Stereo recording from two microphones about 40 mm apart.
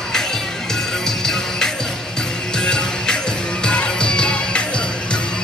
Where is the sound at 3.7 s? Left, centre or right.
Left.